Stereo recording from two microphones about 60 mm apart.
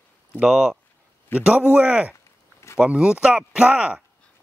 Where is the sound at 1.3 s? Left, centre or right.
Right.